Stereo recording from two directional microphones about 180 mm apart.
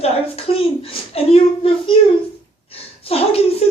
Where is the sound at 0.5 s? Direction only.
35° left (ahead or behind).